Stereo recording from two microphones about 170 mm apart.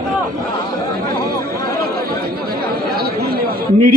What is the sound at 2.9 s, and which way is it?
Chatter, 65° right (ahead or behind).